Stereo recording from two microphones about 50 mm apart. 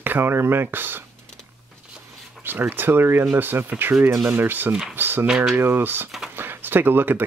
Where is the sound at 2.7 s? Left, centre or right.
Right.